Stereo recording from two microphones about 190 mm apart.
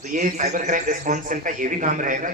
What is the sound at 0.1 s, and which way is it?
A man's voice, 40° right (ahead or behind).